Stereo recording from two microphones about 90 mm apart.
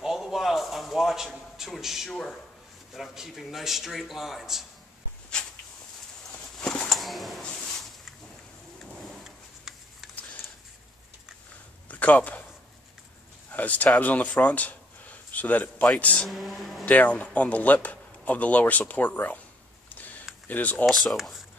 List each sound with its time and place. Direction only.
0.0 s a sound: 5° right (ahead or behind)
2.9 s a man's voice: centre (ahead or behind)
6.6 s bird: 10° left (ahead or behind)
6.9 s a sound: centre (ahead or behind)
9.0 s drawer open or close: centre (ahead or behind)
11.9 s a sound: 15° left (ahead or behind)
13.5 s speech: 15° left (ahead or behind)
16.3 s a man's voice: centre (ahead or behind)
16.8 s speech: 15° left (ahead or behind)
19.9 s a sound: 20° left (ahead or behind)
20.4 s speech: 20° left (ahead or behind)
20.8 s a man's voice: 5° left (ahead or behind)